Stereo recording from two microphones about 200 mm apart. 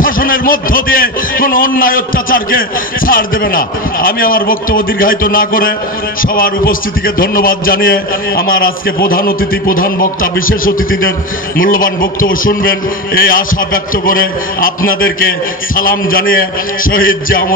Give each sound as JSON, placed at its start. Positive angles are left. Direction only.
{"t": 0.0, "sound": "a man's voice", "side_deg": 45}